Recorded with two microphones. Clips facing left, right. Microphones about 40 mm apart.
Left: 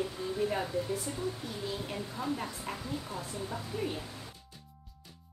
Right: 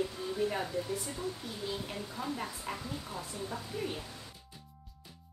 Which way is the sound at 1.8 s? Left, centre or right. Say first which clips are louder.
Left 2 dB; centre.